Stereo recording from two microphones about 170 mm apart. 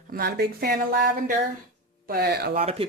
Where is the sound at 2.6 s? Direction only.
35° right (ahead or behind).